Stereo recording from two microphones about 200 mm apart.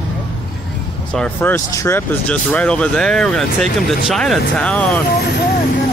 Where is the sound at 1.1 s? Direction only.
10° left (ahead or behind).